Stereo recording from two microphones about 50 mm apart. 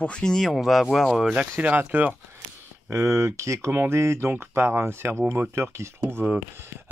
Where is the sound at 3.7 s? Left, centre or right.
Right.